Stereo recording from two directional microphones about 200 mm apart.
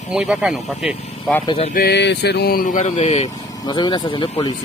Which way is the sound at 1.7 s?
55° left (ahead or behind).